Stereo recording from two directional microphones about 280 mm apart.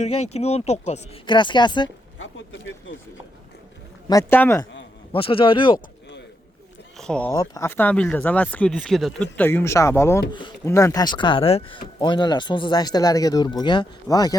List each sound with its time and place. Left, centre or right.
0.0 s speech: left
2.1 s speech: left
4.1 s speech: centre
5.1 s speech: centre
6.9 s speech: centre